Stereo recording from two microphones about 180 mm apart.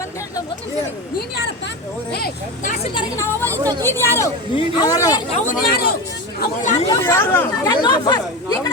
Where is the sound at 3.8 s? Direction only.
15° left (ahead or behind).